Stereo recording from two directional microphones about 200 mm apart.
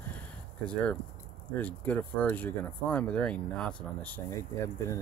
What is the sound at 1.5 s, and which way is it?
Speech, 10° left (ahead or behind).